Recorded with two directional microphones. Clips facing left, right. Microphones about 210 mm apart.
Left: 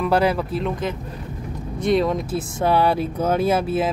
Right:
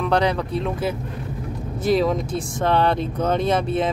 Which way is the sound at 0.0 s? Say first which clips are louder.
Left 1 dB; 5° left (ahead or behind).